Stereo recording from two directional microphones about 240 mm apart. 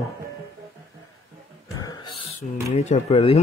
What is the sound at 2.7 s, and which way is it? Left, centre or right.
Speech, left.